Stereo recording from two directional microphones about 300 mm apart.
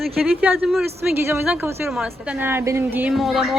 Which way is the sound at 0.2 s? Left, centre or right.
Centre.